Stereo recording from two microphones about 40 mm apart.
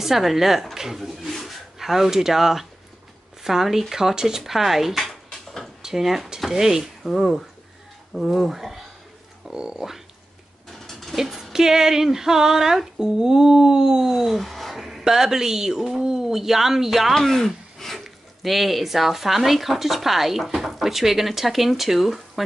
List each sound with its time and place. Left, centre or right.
0.0 s speech: centre
3.4 s female singing: centre
4.4 s speech: centre
6.5 s female singing: centre
7.0 s speech: centre
9.5 s speech: centre
10.7 s a sound: centre
11.1 s music: centre
11.5 s female singing: centre
17.1 s speech: centre